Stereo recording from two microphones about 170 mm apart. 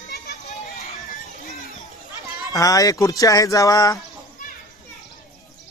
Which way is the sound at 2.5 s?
20° left (ahead or behind).